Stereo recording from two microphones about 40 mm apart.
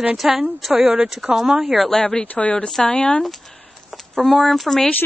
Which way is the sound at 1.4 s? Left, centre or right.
Right.